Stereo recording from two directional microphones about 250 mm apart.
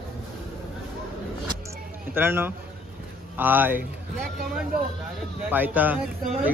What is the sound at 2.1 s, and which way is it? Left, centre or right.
Speech, centre.